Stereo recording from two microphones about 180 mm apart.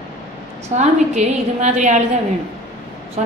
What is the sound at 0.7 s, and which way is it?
A woman's voice, 40° right (ahead or behind).